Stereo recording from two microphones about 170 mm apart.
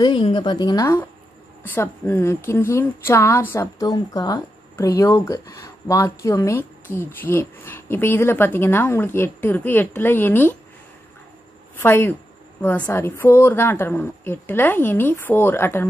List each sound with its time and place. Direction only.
0.0 s a woman's voice: 30° left (ahead or behind); by 10.5 s 10° left (ahead or behind)
11.7 s a woman's voice: 15° left (ahead or behind)